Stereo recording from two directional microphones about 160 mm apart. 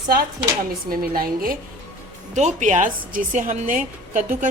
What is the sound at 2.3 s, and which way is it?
A woman's voice, 45° right (ahead or behind).